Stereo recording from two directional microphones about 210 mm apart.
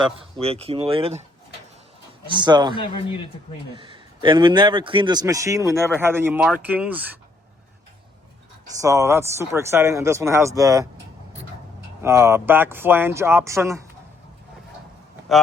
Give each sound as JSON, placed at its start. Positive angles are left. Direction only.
{"t": 0.0, "sound": "a man's voice", "side_deg": -30}
{"t": 2.3, "sound": "a man's voice", "side_deg": -20}
{"t": 2.7, "sound": "a man's voice", "side_deg": 25}
{"t": 3.8, "sound": "a man's voice", "side_deg": -25}
{"t": 8.6, "sound": "speech", "side_deg": -15}
{"t": 12.0, "sound": "speech", "side_deg": -15}